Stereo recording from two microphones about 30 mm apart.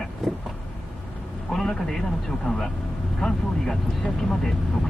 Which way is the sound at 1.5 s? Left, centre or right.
Centre.